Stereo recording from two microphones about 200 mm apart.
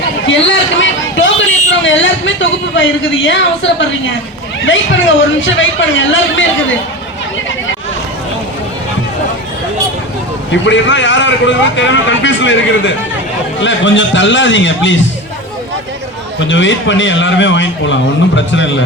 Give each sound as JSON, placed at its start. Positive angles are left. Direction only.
{"t": 0.3, "sound": "a sound", "side_deg": 70}
{"t": 4.6, "sound": "a man's voice", "side_deg": 70}
{"t": 10.5, "sound": "a man's voice", "side_deg": 65}
{"t": 16.5, "sound": "a man's voice", "side_deg": 65}